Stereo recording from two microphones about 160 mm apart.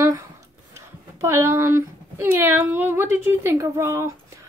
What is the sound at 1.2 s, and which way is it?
A woman's voice, 15° right (ahead or behind).